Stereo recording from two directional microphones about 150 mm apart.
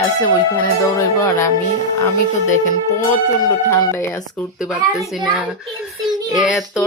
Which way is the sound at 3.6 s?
20° left (ahead or behind).